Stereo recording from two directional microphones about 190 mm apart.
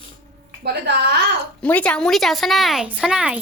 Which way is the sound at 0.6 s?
60° right (ahead or behind).